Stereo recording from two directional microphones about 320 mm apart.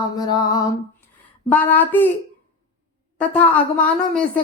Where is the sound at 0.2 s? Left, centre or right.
Centre.